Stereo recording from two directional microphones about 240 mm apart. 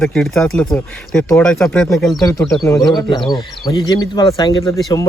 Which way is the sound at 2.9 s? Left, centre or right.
Centre.